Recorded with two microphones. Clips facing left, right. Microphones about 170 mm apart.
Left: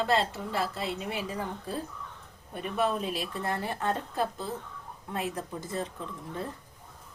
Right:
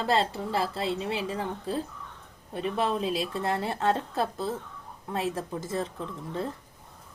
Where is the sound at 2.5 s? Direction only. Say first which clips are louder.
Right 1 dB; 30° right (ahead or behind).